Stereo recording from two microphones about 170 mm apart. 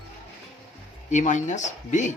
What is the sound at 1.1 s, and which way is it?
Speech, 45° left (ahead or behind).